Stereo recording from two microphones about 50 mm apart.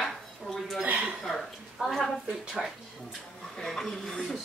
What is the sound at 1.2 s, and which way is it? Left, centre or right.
Speech, centre.